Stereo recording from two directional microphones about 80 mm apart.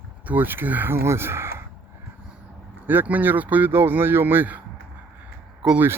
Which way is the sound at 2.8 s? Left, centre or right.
Right.